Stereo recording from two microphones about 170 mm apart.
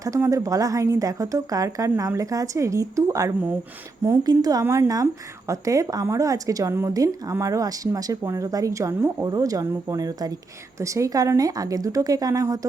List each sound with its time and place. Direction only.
0.0 s speech: 20° right (ahead or behind)